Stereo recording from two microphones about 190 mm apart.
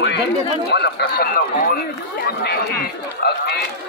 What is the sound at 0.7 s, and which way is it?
Speech, 60° left (ahead or behind).